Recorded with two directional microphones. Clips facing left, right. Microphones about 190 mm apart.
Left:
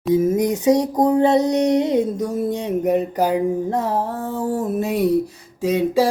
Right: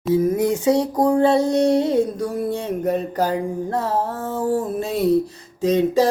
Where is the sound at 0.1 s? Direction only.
20° left (ahead or behind).